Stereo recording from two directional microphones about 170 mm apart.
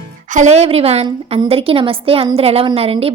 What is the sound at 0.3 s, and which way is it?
A woman's voice, 45° right (ahead or behind).